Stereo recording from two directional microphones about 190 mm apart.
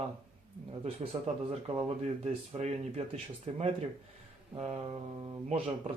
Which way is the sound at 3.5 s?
35° right (ahead or behind).